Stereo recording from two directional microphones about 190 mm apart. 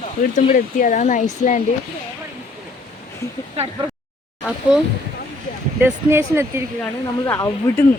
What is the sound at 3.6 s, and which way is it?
Speech, 35° right (ahead or behind).